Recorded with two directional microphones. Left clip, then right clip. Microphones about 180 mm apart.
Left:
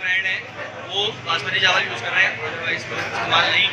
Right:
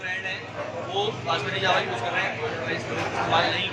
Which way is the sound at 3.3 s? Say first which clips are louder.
Left 7 dB; 25° right (ahead or behind).